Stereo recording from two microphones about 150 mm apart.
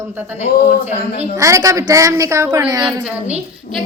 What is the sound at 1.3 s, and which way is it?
A woman's voice, 20° right (ahead or behind).